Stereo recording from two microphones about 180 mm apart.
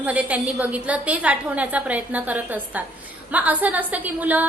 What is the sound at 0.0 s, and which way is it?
A woman's voice, 10° right (ahead or behind).